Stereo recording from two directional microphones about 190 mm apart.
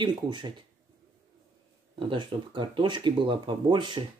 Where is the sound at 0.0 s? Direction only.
25° right (ahead or behind).